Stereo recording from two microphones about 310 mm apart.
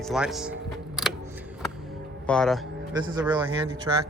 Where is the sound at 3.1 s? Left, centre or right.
Centre.